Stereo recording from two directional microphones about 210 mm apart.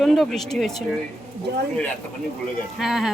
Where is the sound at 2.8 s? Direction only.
Centre (ahead or behind).